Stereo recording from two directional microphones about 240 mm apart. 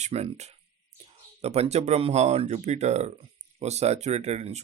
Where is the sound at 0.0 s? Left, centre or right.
Right.